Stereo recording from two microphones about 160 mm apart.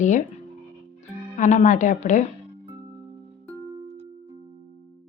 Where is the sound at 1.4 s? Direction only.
50° left (ahead or behind).